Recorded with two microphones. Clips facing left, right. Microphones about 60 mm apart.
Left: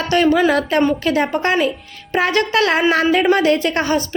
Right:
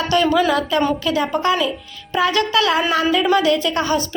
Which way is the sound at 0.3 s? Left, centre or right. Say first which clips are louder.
Left 5 dB; left.